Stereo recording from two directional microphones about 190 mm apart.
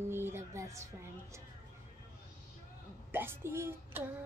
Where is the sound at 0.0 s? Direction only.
10° right (ahead or behind).